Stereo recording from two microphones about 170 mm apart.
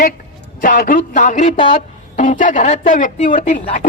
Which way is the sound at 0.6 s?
55° left (ahead or behind).